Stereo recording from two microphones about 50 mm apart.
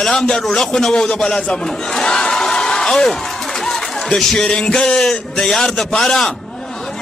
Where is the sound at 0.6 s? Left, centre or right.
Centre.